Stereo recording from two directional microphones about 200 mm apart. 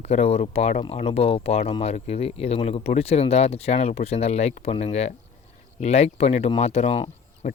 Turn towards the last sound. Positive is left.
turn(degrees=30)  # may be behind; listen again after turning